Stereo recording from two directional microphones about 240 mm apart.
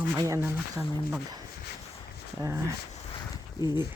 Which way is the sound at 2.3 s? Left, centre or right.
Centre.